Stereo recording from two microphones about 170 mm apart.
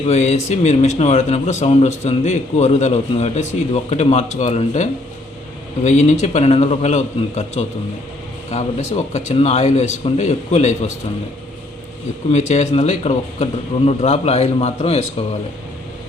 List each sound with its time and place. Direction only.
0.1 s a man's voice: 40° left (ahead or behind)
12.3 s a man's voice: 40° left (ahead or behind)